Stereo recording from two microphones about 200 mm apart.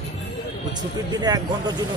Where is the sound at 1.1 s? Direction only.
20° right (ahead or behind).